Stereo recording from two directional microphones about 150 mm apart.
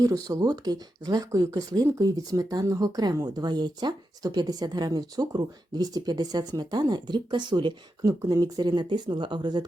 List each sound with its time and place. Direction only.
0.0 s speech: 25° right (ahead or behind)